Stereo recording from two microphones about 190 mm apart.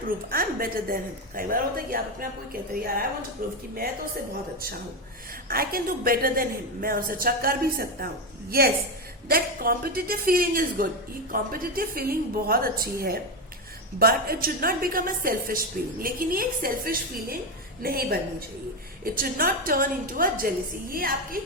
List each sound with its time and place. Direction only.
0.3 s a woman's voice: 50° right (ahead or behind)
5.5 s a woman's voice: 50° right (ahead or behind)